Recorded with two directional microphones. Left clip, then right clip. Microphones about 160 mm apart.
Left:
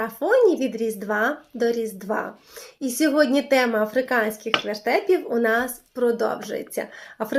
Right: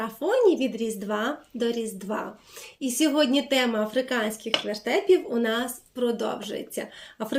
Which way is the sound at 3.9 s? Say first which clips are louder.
Left 5 dB; 40° left (ahead or behind).